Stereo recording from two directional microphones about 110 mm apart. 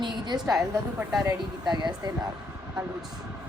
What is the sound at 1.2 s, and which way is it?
Speech, 35° right (ahead or behind).